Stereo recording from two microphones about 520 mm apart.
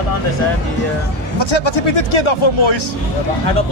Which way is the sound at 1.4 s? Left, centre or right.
Left.